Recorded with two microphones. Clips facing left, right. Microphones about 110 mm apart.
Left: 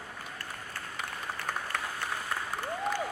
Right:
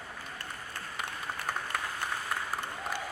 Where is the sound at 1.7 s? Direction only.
5° right (ahead or behind).